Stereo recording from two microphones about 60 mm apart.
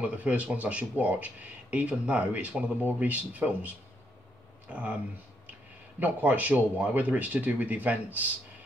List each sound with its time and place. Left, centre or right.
0.0 s speech: right
5.9 s speech: right